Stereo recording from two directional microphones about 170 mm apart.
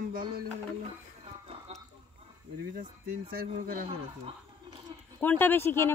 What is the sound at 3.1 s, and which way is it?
Speech, 60° right (ahead or behind).